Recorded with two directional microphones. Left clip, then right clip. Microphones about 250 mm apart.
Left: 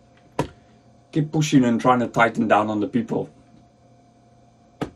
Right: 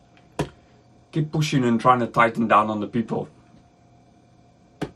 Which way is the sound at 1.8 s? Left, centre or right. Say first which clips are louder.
Right 4 dB; right.